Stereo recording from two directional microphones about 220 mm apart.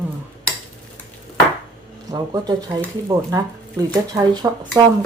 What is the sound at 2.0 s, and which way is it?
Speech, 15° right (ahead or behind).